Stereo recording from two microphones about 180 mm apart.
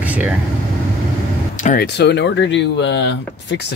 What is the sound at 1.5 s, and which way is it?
Vehicle, 45° left (ahead or behind).